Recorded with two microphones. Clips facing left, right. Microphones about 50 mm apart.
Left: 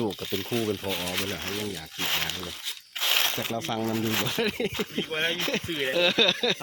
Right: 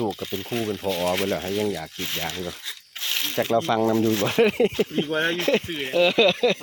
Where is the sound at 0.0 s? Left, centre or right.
Centre.